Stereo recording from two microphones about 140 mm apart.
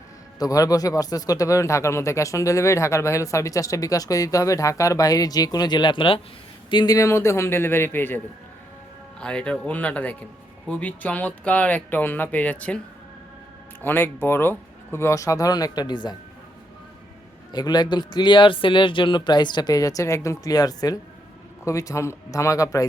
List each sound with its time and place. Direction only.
0.3 s speech: 25° left (ahead or behind)
9.2 s speech: 5° left (ahead or behind)
13.8 s speech: 15° left (ahead or behind); by 16.1 s 30° left (ahead or behind)
17.5 s speech: 30° left (ahead or behind)